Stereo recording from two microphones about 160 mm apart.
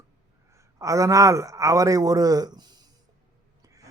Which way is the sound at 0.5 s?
20° right (ahead or behind).